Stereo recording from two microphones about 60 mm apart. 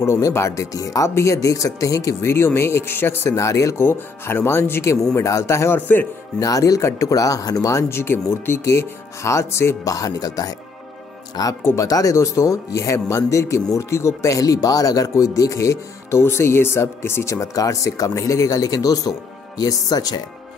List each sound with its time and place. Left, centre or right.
0.3 s speech: left
0.7 s speech: left
2.2 s speech: left
3.3 s speech: left
3.7 s speech: left
5.1 s speech: left
6.4 s speech: left
7.9 s speech: left
8.6 s speech: left
9.8 s speech: left
11.7 s speech: left
17.6 s speech: left